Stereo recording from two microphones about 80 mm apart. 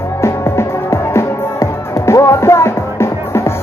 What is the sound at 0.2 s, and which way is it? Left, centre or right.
Music, left.